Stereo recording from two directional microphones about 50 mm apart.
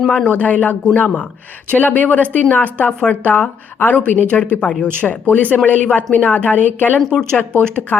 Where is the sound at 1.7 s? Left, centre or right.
Left.